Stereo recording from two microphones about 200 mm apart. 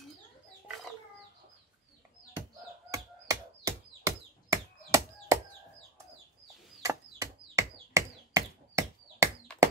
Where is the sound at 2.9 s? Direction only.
15° right (ahead or behind).